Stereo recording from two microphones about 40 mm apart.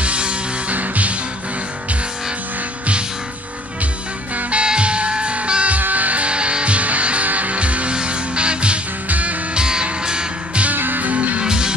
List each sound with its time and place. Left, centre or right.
0.0 s music: right
4.5 s music: right
5.8 s music: right
10.8 s music: right
11.4 s music: centre